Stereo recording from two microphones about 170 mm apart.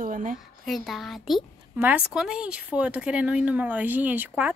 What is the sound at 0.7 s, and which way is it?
A child's voice, centre (ahead or behind).